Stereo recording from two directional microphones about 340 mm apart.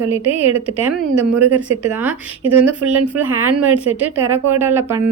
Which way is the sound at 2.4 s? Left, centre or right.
Right.